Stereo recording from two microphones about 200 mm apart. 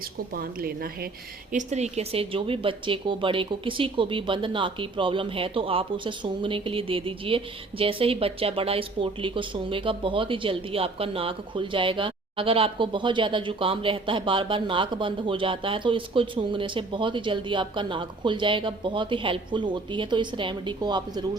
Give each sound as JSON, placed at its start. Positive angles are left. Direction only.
{"t": 0.3, "sound": "a woman's voice", "side_deg": -50}
{"t": 1.5, "sound": "speech", "side_deg": -35}